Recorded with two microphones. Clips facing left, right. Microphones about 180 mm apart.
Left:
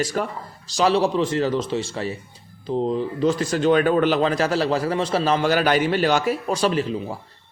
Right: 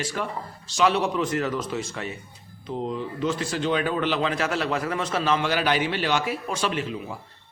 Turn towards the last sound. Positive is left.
turn(degrees=35)  # may be behind; listen again after turning